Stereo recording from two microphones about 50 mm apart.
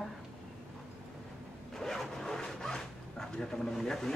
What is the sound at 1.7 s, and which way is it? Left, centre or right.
Speech, centre.